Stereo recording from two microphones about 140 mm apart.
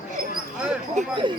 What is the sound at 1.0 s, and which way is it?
Speech, 60° right (ahead or behind).